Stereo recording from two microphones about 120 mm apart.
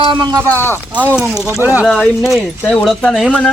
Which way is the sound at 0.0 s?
40° right (ahead or behind).